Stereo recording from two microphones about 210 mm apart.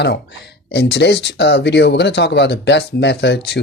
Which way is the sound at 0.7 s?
55° left (ahead or behind).